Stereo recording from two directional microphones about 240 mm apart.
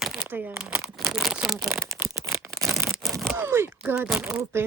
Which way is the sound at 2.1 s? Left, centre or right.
Centre.